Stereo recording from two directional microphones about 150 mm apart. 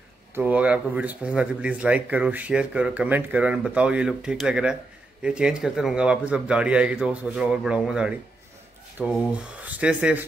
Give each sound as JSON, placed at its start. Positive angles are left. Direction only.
{"t": 0.3, "sound": "speech", "side_deg": -10}